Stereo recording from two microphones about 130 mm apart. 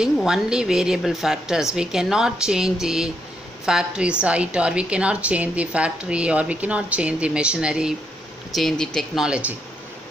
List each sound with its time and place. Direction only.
0.0 s a woman's voice: 5° right (ahead or behind)